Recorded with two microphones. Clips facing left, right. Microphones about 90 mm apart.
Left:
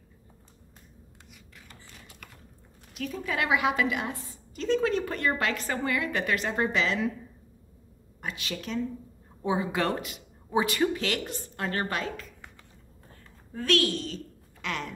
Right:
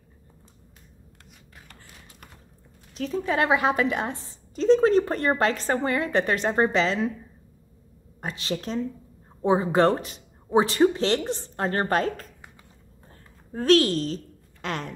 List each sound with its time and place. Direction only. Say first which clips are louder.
2.9 s a woman's voice: right 6 dB; 30° right (ahead or behind)
8.2 s a woman's voice: right 5 dB; 35° right (ahead or behind)
13.5 s a woman's voice: right 7 dB; 35° right (ahead or behind)